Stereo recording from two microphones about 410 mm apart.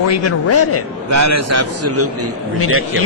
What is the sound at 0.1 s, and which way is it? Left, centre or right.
Speech, left.